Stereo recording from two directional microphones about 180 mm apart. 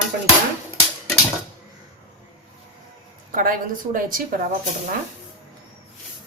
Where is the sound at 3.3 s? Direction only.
50° right (ahead or behind).